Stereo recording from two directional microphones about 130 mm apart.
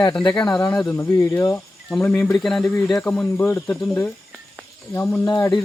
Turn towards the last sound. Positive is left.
turn(degrees=30)  # may be behind; listen again after turning